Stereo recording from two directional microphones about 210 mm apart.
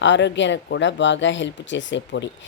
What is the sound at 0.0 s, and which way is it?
Speech, 60° left (ahead or behind).